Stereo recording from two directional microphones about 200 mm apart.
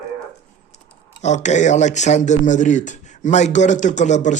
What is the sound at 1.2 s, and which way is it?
Speech, 35° left (ahead or behind).